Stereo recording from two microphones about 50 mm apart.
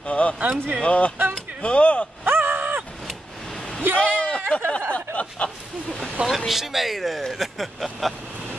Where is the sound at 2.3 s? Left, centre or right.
Right.